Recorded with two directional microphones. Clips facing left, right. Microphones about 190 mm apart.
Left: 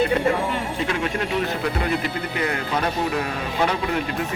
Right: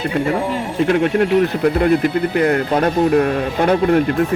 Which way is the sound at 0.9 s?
55° right (ahead or behind).